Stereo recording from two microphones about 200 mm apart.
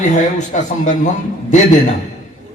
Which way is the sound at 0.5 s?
40° left (ahead or behind).